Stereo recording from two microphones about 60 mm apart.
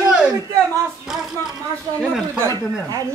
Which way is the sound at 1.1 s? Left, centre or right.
Centre.